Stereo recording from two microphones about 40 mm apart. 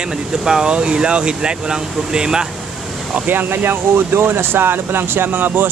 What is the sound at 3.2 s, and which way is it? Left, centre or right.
Speech, right.